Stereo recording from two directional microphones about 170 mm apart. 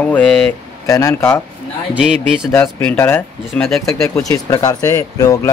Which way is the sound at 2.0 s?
5° right (ahead or behind).